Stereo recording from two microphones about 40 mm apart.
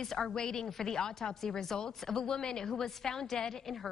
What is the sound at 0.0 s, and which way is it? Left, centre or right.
A woman's voice, centre.